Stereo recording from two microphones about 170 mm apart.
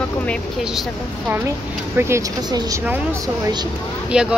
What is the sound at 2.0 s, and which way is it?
A woman's voice, 15° right (ahead or behind).